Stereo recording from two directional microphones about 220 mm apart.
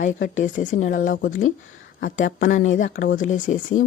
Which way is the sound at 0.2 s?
35° left (ahead or behind).